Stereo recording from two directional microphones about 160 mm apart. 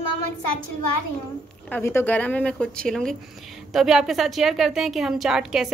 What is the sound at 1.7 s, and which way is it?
A woman's voice, 15° left (ahead or behind).